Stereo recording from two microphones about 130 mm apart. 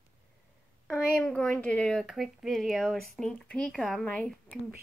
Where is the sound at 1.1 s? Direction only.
5° left (ahead or behind).